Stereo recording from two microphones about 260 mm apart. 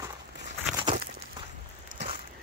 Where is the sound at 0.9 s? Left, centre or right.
Centre.